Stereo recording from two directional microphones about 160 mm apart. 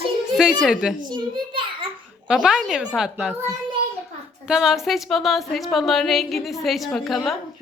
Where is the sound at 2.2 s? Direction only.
5° right (ahead or behind).